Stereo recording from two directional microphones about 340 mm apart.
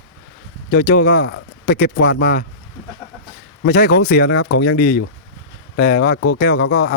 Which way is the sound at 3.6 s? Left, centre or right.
Left.